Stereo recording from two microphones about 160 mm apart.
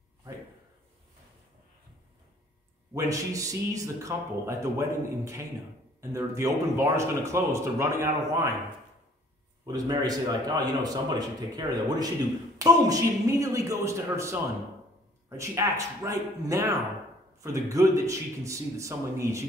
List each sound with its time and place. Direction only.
2.9 s a man's voice: 20° right (ahead or behind)
9.7 s a man's voice: 25° right (ahead or behind)